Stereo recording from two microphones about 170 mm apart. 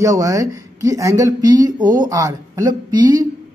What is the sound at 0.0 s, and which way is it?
Speech, 20° right (ahead or behind).